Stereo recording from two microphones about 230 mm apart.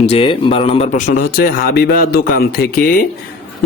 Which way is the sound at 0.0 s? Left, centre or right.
Left.